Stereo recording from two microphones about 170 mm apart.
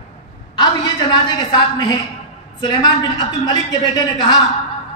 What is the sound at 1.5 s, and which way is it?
A man's voice, 25° left (ahead or behind).